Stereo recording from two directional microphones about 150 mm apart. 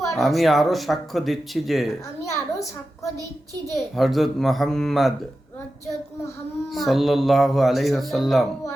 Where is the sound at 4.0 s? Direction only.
Centre (ahead or behind).